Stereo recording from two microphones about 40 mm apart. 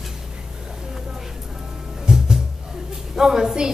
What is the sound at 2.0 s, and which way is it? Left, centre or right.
Music, centre.